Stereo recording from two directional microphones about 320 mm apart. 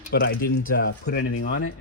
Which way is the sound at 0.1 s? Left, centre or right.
Left.